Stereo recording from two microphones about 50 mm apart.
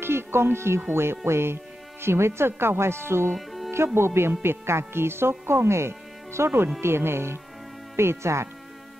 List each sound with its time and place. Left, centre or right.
0.0 s speech: right
3.3 s music: centre
3.7 s speech: right